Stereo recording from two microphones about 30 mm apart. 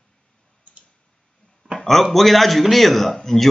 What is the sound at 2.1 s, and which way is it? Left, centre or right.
A man's voice, centre.